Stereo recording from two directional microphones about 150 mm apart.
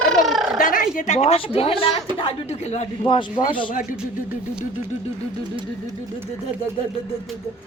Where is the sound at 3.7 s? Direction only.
65° left (ahead or behind).